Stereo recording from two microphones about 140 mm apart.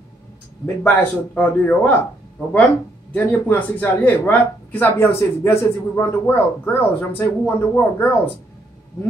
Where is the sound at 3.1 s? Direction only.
10° left (ahead or behind).